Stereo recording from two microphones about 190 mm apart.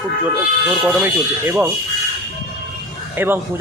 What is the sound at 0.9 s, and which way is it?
Speech, 10° right (ahead or behind).